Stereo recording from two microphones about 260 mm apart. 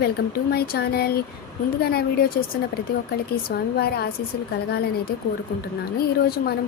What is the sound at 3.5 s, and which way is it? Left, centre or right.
Speech, left.